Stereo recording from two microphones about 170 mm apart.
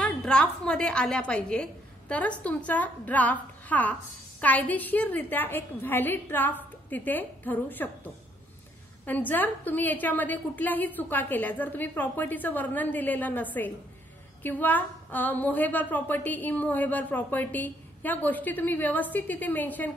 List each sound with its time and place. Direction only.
0.0 s a woman's voice: 5° left (ahead or behind)
9.0 s a woman's voice: 10° left (ahead or behind)